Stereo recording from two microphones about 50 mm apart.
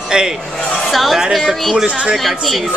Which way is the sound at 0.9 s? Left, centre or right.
Centre.